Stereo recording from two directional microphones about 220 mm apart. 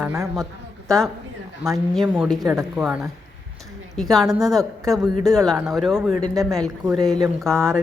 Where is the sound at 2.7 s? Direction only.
5° right (ahead or behind).